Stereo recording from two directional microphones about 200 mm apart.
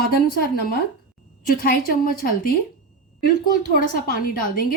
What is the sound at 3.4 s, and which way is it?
Speech, 45° left (ahead or behind).